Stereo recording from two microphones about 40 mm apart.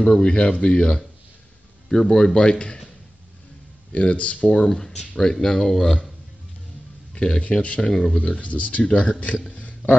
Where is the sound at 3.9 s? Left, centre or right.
Left.